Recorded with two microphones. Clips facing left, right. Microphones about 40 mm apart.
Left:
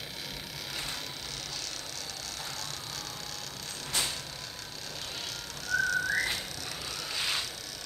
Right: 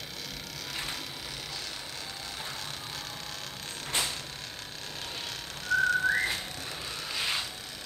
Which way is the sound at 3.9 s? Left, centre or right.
Right.